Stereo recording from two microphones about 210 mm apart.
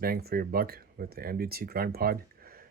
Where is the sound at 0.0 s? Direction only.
45° right (ahead or behind).